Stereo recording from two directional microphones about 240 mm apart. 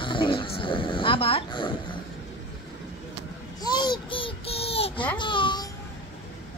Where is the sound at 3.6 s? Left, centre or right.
Centre.